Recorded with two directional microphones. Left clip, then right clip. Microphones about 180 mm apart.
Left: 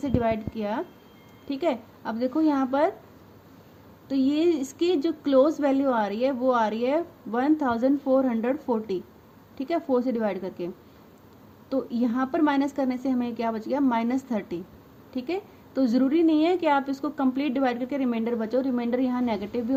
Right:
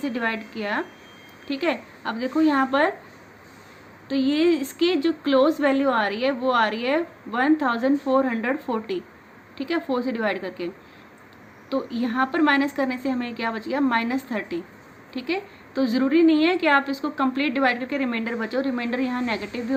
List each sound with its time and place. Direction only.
0.0 s a woman's voice: 65° left (ahead or behind)
4.1 s a woman's voice: 65° left (ahead or behind)
9.6 s a woman's voice: 65° left (ahead or behind)
11.7 s a woman's voice: 65° left (ahead or behind)